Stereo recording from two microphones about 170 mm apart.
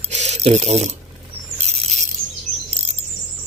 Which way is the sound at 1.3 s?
35° right (ahead or behind).